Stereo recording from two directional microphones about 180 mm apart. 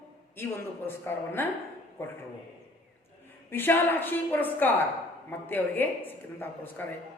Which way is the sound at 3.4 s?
10° left (ahead or behind).